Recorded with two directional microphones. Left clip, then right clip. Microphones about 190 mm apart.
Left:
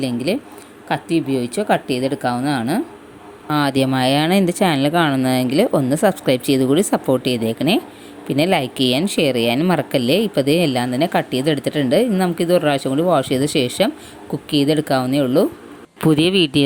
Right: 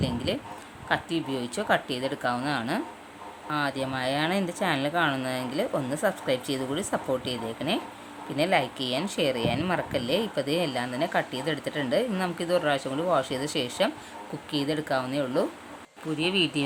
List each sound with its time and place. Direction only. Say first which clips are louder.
0.0 s speech: left 9 dB; 25° left (ahead or behind)
16.0 s speech: left 11 dB; 45° left (ahead or behind)